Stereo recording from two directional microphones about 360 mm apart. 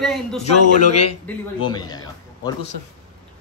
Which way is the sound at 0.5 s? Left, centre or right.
Left.